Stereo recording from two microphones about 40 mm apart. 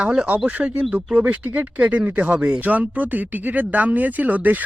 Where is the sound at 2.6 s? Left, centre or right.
Right.